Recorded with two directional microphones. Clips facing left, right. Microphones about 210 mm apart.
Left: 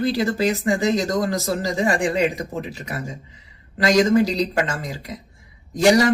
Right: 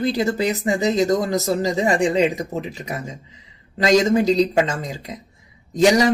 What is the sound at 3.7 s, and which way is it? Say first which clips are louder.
Speech: even; 20° right (ahead or behind).